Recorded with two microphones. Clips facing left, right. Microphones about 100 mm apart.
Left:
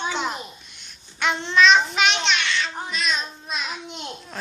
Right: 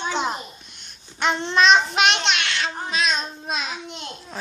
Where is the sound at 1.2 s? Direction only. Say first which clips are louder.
Right 2 dB; 35° right (ahead or behind).